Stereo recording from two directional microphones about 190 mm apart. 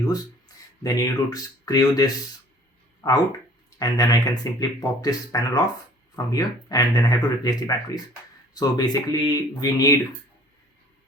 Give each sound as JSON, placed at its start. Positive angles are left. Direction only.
{"t": 0.0, "sound": "speech", "side_deg": 20}